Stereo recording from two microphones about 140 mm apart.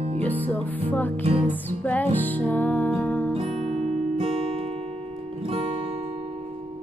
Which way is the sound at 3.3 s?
45° right (ahead or behind).